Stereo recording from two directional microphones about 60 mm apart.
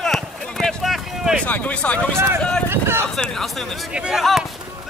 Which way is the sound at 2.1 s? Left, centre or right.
Right.